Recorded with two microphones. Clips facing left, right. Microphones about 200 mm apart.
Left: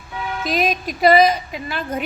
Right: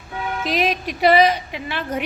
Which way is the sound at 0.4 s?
35° left (ahead or behind).